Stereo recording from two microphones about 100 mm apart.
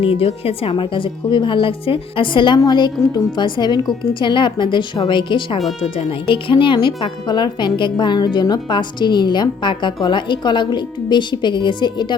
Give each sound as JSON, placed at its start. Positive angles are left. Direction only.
{"t": 0.0, "sound": "a woman's voice", "side_deg": 70}